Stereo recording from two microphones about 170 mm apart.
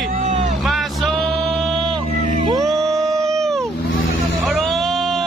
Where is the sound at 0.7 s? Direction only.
Centre (ahead or behind).